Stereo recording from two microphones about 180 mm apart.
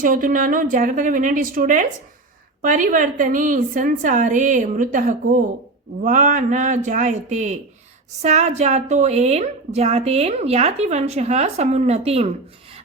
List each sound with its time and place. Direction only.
0.0 s a woman's voice: 50° right (ahead or behind)